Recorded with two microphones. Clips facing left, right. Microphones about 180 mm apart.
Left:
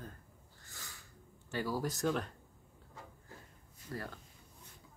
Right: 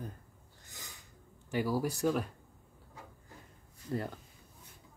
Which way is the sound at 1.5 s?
10° right (ahead or behind).